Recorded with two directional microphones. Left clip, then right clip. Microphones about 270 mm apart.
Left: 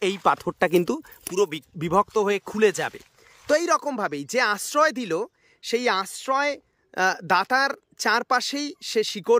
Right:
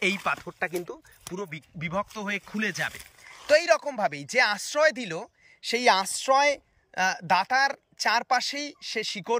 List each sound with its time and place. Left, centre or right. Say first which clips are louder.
0.0 s speech: left 5 dB; left
1.8 s speech: left 10 dB; left